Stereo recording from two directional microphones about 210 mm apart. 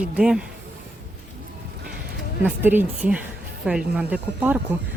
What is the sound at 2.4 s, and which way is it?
Speech, 10° right (ahead or behind).